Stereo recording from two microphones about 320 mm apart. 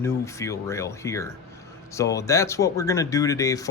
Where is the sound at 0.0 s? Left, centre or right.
Centre.